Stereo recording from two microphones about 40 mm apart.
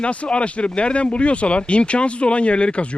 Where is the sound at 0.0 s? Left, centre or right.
Left.